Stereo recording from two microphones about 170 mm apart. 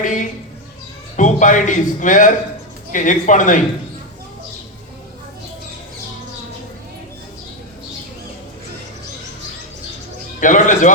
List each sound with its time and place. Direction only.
0.0 s a man's voice: 50° left (ahead or behind)
10.4 s a man's voice: 50° left (ahead or behind)